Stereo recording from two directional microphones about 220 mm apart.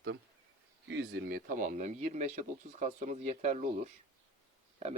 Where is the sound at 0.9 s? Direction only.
50° right (ahead or behind).